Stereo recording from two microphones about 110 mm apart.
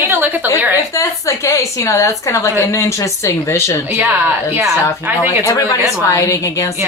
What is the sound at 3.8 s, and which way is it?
A woman's voice, 15° right (ahead or behind).